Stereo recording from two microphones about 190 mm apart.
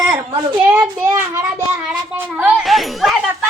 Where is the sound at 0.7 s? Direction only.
10° right (ahead or behind).